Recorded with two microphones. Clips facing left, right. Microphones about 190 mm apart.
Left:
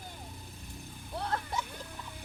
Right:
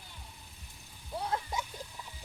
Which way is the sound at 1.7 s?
60° left (ahead or behind).